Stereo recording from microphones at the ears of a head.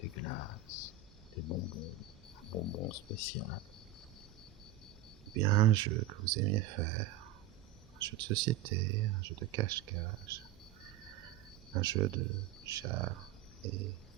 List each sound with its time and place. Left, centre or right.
0.0 s a sound: left
1.4 s speech: left
5.3 s speech: right
11.7 s speech: right